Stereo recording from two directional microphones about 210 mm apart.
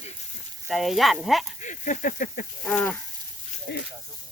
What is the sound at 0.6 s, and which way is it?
Speech, centre (ahead or behind).